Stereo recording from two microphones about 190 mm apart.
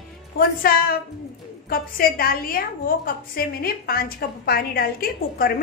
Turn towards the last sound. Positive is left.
turn(degrees=55)  # may be behind; listen again after turning